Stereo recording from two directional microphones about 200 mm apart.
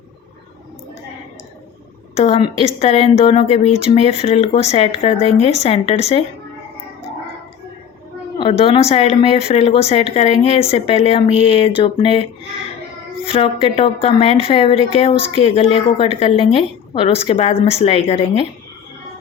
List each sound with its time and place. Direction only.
2.1 s speech: 30° left (ahead or behind)
8.4 s a woman's voice: 30° left (ahead or behind)
13.3 s a woman's voice: 30° left (ahead or behind)